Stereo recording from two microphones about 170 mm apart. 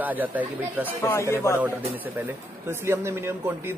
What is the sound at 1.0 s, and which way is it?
Speech, 15° left (ahead or behind).